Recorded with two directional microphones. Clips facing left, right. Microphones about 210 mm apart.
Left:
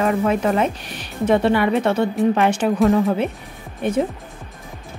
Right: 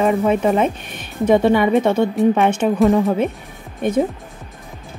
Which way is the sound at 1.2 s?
10° right (ahead or behind).